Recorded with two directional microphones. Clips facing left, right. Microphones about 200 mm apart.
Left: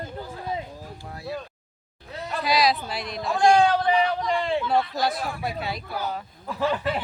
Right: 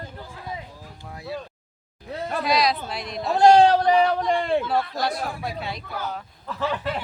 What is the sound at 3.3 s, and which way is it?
Speech, 40° right (ahead or behind).